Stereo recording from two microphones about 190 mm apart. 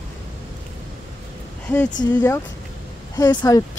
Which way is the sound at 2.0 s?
20° left (ahead or behind).